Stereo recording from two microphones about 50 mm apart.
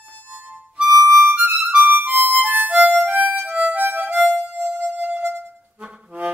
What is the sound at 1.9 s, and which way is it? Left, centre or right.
Harmonica, right.